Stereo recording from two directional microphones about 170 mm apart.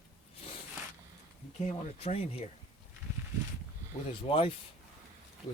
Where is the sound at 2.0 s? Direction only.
35° left (ahead or behind).